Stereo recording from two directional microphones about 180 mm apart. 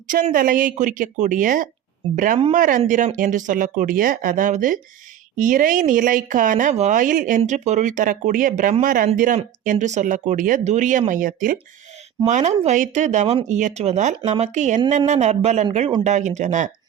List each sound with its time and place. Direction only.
0.1 s speech: 45° right (ahead or behind)
12.2 s speech: 40° right (ahead or behind)